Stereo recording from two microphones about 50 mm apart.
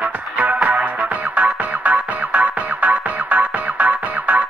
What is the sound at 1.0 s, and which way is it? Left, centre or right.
Music, right.